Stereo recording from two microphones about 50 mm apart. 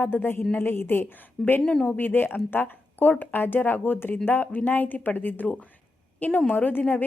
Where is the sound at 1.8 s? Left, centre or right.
Left.